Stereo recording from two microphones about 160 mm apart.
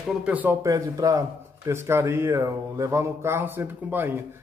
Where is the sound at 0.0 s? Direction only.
5° right (ahead or behind).